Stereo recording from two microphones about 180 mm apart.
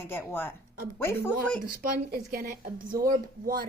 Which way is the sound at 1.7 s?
55° right (ahead or behind).